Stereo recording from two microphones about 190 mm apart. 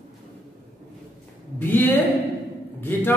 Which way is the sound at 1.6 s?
10° left (ahead or behind).